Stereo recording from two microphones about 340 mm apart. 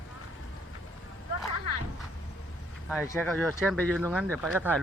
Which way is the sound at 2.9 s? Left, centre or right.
Centre.